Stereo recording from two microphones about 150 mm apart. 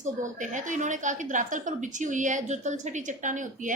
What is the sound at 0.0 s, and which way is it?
A woman's voice, 55° right (ahead or behind).